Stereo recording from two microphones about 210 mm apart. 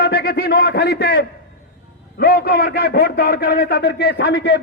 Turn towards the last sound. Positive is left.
turn(degrees=55)  # may be behind; listen again after turning